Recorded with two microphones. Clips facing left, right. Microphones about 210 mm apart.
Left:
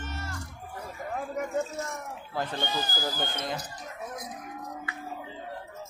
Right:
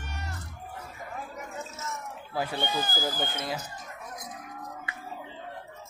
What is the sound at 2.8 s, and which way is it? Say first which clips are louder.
Speech: right 1 dB; 50° right (ahead or behind).